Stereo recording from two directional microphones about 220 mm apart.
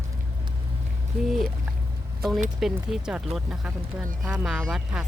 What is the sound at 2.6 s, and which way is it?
Speech, centre (ahead or behind).